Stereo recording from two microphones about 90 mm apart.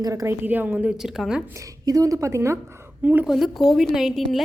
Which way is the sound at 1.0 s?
5° right (ahead or behind).